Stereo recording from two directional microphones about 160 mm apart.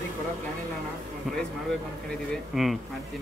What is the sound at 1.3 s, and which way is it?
Speech, centre (ahead or behind).